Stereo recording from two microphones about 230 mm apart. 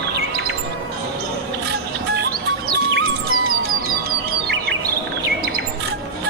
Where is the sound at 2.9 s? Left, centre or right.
Right.